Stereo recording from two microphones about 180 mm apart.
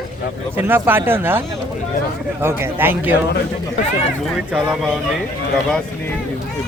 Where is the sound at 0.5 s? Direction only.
10° right (ahead or behind).